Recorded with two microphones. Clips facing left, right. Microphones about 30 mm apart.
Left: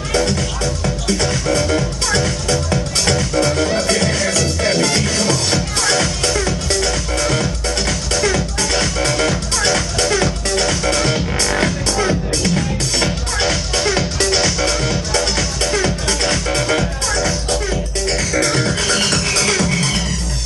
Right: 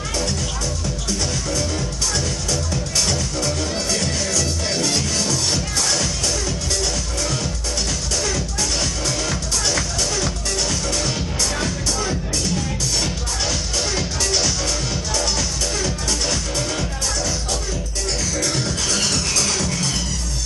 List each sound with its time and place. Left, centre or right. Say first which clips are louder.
0.8 s music: left 8 dB; left
8.7 s music: left 9 dB; left
18.3 s music: left 6 dB; left